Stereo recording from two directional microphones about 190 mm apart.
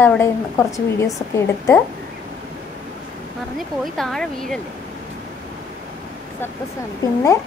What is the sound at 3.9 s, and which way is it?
Speech, centre (ahead or behind).